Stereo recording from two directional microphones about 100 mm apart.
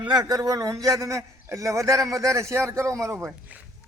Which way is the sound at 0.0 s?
45° right (ahead or behind).